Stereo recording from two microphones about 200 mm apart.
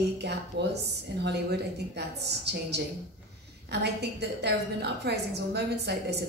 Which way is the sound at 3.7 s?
55° right (ahead or behind).